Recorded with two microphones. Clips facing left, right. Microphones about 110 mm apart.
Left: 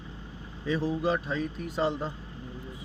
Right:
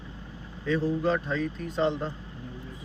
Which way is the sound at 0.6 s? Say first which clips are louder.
Right 2 dB; 10° left (ahead or behind).